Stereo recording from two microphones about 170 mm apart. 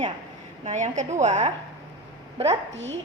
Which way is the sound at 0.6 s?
45° right (ahead or behind).